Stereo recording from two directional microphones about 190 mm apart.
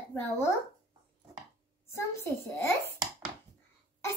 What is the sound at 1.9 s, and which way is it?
A child's voice, 15° left (ahead or behind).